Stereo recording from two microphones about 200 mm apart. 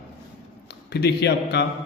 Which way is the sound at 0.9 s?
55° left (ahead or behind).